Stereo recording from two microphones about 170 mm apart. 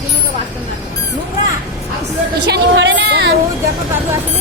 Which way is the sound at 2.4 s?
85° right.